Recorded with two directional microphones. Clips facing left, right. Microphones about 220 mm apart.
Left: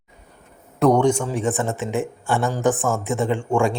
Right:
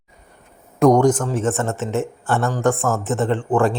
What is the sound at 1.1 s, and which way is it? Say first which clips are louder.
Speech: right 2 dB; 5° left (ahead or behind).